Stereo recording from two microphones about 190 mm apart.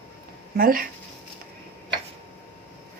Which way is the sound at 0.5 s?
50° right (ahead or behind).